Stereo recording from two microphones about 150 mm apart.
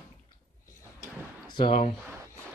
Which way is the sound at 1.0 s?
30° left (ahead or behind).